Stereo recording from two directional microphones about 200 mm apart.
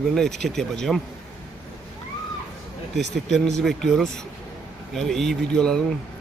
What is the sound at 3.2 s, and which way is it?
Speech, centre (ahead or behind).